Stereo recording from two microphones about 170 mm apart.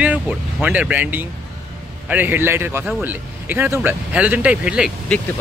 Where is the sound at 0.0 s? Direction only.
10° right (ahead or behind).